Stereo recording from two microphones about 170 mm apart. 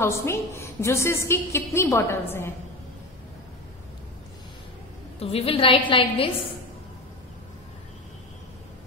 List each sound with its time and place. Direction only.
0.0 s a woman's voice: 15° left (ahead or behind)
5.2 s a woman's voice: 35° left (ahead or behind)